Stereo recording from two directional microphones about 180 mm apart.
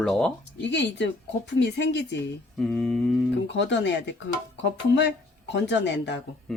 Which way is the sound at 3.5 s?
80° left.